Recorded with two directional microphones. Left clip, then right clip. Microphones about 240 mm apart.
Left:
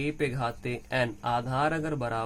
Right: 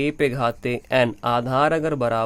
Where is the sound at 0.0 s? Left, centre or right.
Right.